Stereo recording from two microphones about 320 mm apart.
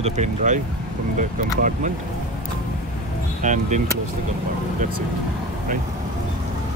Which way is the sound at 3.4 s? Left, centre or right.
Right.